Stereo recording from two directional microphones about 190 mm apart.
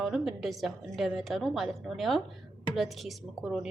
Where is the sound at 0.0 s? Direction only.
Centre (ahead or behind).